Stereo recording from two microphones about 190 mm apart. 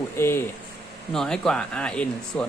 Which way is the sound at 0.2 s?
10° left (ahead or behind).